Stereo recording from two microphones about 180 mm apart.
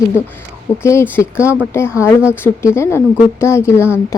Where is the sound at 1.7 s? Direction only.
15° left (ahead or behind).